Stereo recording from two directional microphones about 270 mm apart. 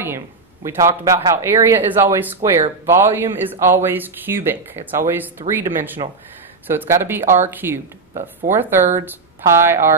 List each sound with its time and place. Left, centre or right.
0.7 s speech: centre
8.1 s speech: right
8.5 s speech: centre